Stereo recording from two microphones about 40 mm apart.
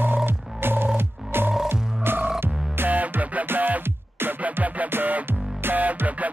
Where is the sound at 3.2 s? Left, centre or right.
Right.